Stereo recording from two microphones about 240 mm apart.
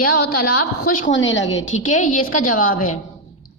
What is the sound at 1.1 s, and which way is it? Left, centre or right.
Speech, left.